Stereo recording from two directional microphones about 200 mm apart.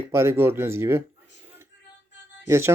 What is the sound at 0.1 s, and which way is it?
Speech, 15° right (ahead or behind).